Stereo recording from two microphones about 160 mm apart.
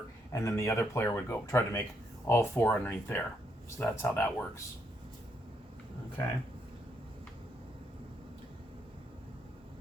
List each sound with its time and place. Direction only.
0.3 s speech: 20° left (ahead or behind)